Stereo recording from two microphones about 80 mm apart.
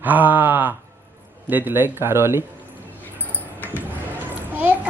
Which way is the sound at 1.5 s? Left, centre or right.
Right.